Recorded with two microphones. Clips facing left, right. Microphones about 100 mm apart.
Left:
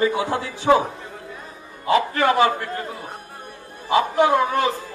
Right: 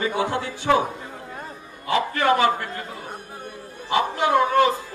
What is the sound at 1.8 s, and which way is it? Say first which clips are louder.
Speech: left 2 dB; 20° left (ahead or behind).